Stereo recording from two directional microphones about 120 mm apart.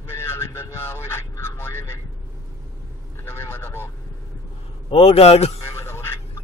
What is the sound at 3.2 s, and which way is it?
Vehicle, 20° left (ahead or behind).